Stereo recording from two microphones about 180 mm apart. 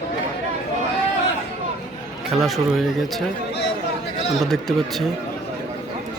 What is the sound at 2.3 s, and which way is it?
Speech, centre (ahead or behind).